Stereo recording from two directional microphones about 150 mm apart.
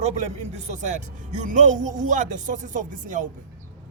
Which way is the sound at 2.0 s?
55° right (ahead or behind).